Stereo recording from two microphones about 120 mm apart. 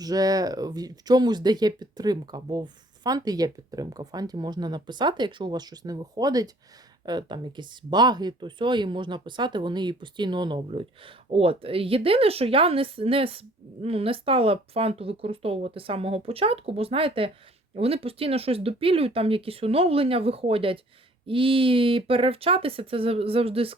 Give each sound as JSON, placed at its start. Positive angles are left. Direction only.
{"t": 0.0, "sound": "speech", "side_deg": -30}
{"t": 10.7, "sound": "a woman's voice", "side_deg": -50}